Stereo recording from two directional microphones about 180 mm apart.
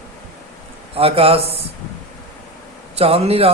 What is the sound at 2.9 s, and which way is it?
Speech, 35° right (ahead or behind).